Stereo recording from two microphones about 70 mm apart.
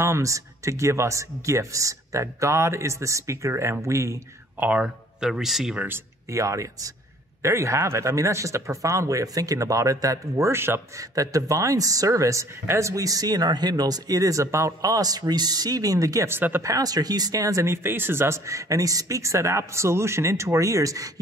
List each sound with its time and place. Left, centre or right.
0.0 s speech: right
4.6 s speech: right
5.2 s speech: centre
6.2 s speech: right
10.5 s speech: right
11.0 s speech: right
14.9 s speech: right
16.3 s speech: right
16.6 s speech: right
17.8 s speech: right